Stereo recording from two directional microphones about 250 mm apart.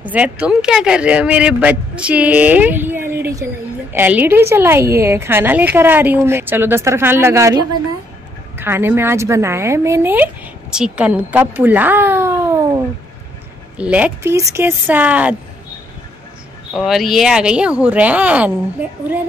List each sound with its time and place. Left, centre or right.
0.1 s speech: centre
16.7 s speech: centre